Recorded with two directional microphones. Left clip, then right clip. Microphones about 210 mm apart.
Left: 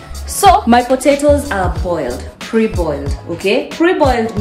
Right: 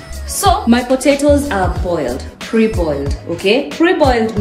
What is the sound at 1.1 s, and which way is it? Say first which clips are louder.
A woman's voice: right 1 dB; 5° left (ahead or behind).